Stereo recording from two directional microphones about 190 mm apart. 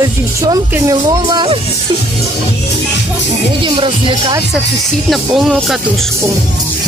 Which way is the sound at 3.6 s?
25° right (ahead or behind).